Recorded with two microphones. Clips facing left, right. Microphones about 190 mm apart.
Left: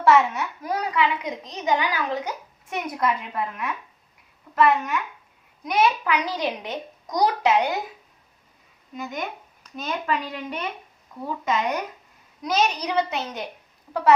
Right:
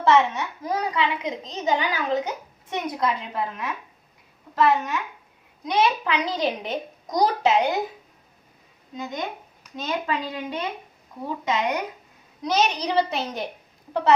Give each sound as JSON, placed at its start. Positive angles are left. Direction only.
{"t": 0.0, "sound": "a child's voice", "side_deg": -20}
{"t": 9.0, "sound": "a child's voice", "side_deg": -20}